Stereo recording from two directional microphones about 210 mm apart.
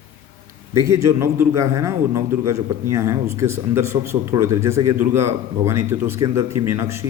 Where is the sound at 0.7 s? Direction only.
15° right (ahead or behind).